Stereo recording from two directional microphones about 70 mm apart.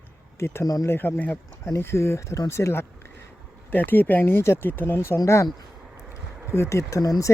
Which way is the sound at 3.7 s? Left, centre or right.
Left.